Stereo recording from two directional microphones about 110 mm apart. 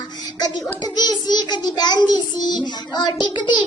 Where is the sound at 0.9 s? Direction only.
40° left (ahead or behind).